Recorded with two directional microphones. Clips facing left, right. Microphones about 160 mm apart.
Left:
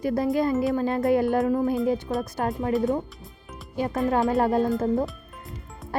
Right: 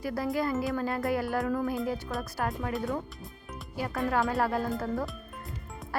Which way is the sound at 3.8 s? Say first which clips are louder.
Left 5 dB; 20° left (ahead or behind).